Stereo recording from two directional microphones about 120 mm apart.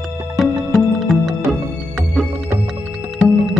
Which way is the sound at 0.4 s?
Centre (ahead or behind).